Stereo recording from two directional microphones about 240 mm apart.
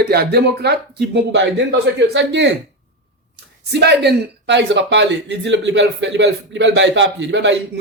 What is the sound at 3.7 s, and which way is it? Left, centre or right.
Speech, right.